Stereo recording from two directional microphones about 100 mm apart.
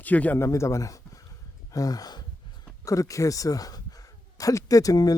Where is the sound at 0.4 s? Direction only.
30° left (ahead or behind).